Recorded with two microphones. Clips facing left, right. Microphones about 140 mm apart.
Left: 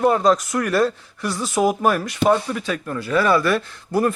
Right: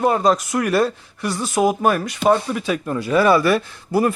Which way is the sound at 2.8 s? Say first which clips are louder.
Right 3 dB; 20° right (ahead or behind).